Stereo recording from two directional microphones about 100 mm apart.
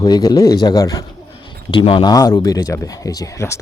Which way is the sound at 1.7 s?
60° left (ahead or behind).